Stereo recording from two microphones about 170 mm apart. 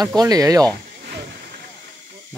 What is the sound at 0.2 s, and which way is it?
Speech, 20° right (ahead or behind).